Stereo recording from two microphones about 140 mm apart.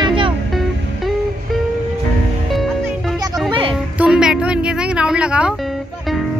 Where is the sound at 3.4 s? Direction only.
40° right (ahead or behind).